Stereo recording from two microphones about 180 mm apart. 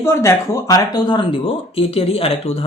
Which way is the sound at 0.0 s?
15° left (ahead or behind).